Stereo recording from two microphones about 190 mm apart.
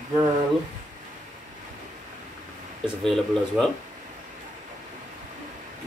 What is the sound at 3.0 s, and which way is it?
Speech, centre (ahead or behind).